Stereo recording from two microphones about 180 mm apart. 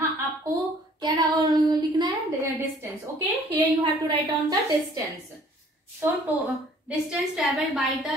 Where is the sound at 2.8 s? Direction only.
20° right (ahead or behind).